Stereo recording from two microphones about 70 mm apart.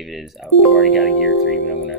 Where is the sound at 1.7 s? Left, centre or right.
Right.